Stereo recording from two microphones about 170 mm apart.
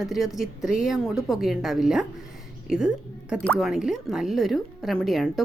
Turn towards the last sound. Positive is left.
turn(degrees=0)  # may be behind; listen again after turning